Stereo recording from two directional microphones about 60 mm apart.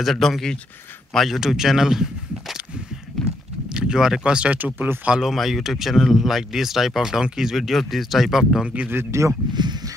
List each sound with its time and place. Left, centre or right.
0.0 s speech: centre
3.1 s horse: centre
3.7 s speech: centre
4.6 s speech: right
5.2 s speech: centre
8.6 s speech: right
9.1 s speech: right